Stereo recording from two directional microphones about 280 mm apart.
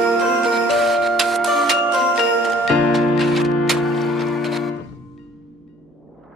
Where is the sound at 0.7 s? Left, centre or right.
Centre.